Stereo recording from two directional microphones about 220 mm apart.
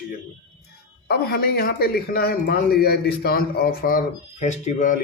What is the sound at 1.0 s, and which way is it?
Speech, 45° left (ahead or behind).